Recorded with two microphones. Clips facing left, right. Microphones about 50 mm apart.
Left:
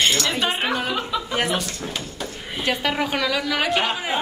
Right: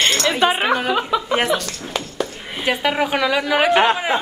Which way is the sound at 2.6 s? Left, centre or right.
Centre.